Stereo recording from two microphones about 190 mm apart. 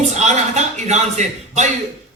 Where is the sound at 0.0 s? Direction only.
35° right (ahead or behind).